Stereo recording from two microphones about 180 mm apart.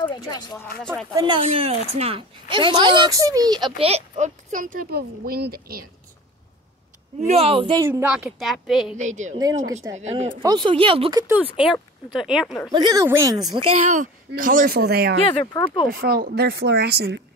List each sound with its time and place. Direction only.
0.0 s speech: 25° left (ahead or behind)
1.1 s speech: 25° right (ahead or behind)
1.4 s a woman's voice: 35° right (ahead or behind); by 5.9 s 55° right (ahead or behind)
7.2 s a woman's voice: 35° right (ahead or behind)
7.8 s a woman's voice: 10° right (ahead or behind)
8.9 s a woman's voice: 40° right (ahead or behind)
10.2 s speech: 25° right (ahead or behind)
11.6 s a woman's voice: 5° right (ahead or behind)
12.7 s a woman's voice: 20° right (ahead or behind); by 15.1 s 60° right (ahead or behind)
15.5 s speech: 25° left (ahead or behind)
15.9 s speech: 55° right (ahead or behind)